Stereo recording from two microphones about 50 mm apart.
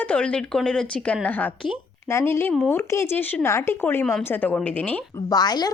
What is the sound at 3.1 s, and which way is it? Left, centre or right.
Speech, left.